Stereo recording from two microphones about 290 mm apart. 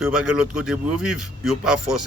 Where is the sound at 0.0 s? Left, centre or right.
Centre.